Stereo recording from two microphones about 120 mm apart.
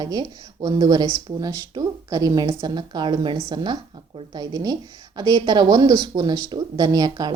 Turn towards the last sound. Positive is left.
turn(degrees=-35)  # may be behind; listen again after turning